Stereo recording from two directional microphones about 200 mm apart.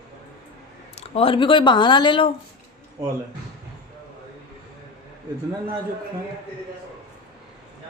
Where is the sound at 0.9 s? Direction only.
30° left (ahead or behind).